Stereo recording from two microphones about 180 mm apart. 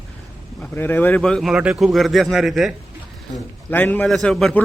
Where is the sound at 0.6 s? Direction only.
10° left (ahead or behind).